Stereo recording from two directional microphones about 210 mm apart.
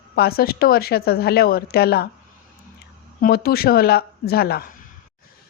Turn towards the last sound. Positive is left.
turn(degrees=50)  # may be behind; listen again after turning